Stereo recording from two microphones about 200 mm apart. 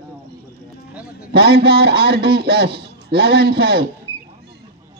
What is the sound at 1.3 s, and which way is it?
A man's voice, 50° right (ahead or behind).